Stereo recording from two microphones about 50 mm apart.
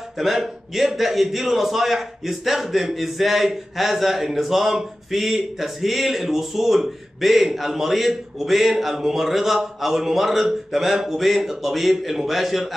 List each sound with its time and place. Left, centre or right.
0.2 s a man's voice: centre